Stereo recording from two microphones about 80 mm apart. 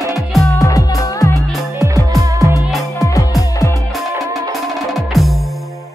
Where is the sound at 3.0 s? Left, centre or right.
Left.